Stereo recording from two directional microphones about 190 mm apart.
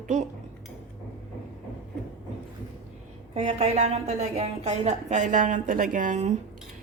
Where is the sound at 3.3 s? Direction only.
35° right (ahead or behind).